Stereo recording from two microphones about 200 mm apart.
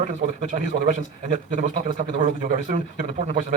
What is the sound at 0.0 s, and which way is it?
A man's voice, 40° right (ahead or behind).